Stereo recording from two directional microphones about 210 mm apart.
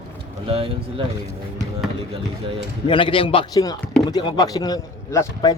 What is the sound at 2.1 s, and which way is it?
Speech, 25° right (ahead or behind).